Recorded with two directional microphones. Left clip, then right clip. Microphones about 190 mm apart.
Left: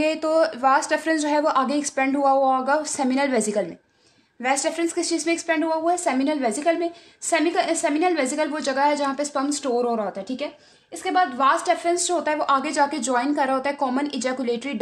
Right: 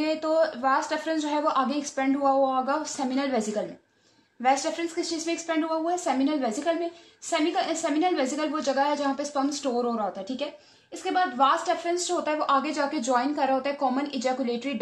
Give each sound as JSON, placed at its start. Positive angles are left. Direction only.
{"t": 0.0, "sound": "a woman's voice", "side_deg": 45}